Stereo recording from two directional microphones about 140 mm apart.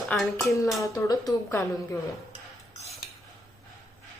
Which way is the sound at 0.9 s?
25° left (ahead or behind).